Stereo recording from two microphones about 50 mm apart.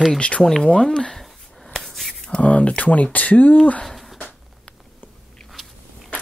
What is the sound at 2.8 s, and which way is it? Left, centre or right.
Speech, left.